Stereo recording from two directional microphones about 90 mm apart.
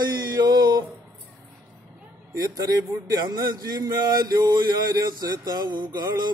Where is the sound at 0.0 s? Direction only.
50° right (ahead or behind).